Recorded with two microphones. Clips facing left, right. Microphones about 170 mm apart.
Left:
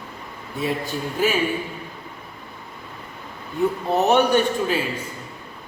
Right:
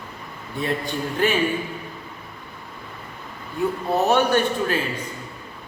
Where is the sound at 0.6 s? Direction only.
5° left (ahead or behind).